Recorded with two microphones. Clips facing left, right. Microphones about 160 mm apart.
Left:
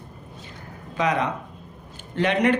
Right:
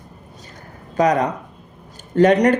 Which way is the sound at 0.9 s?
45° right (ahead or behind).